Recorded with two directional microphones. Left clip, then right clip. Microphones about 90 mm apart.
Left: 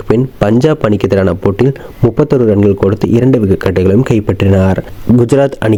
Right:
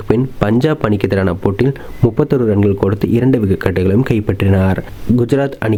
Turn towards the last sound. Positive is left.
turn(degrees=40)  # may be behind; listen again after turning